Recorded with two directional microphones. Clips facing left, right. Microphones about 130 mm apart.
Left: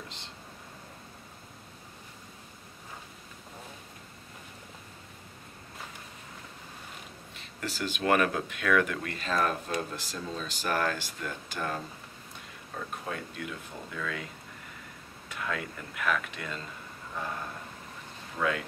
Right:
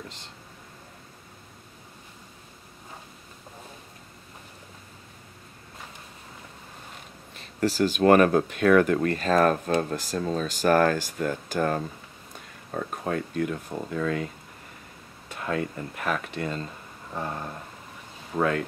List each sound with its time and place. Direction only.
7.3 s speech: 35° right (ahead or behind)
17.1 s a sound: 30° right (ahead or behind)
18.3 s speech: 45° right (ahead or behind)